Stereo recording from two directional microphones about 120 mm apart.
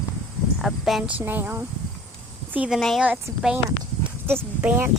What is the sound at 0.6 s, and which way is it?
Speech, centre (ahead or behind).